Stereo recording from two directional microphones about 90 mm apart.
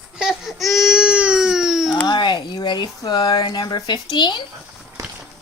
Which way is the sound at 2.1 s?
55° left (ahead or behind).